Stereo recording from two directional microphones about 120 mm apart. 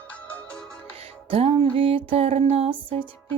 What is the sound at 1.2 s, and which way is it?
Music, 55° right (ahead or behind).